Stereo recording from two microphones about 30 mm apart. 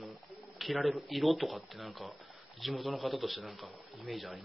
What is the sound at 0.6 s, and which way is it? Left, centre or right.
A woman's voice, centre.